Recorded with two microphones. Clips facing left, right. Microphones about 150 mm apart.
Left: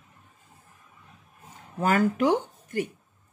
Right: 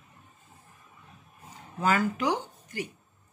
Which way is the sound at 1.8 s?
50° left (ahead or behind).